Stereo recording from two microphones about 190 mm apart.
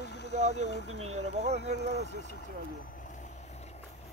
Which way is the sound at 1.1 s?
35° right (ahead or behind).